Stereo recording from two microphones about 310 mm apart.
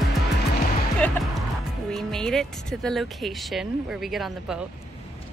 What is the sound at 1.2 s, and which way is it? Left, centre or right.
Music, centre.